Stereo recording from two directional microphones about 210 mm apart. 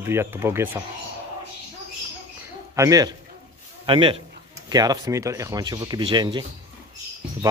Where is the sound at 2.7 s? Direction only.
15° right (ahead or behind).